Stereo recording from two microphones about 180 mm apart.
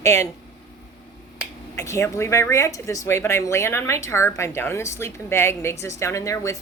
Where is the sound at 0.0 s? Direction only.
15° left (ahead or behind).